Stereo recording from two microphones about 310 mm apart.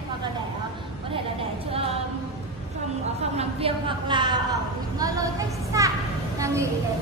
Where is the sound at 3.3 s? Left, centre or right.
Centre.